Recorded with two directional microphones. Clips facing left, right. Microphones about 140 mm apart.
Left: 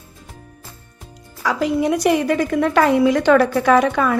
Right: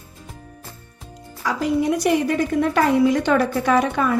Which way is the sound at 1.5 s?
90° left.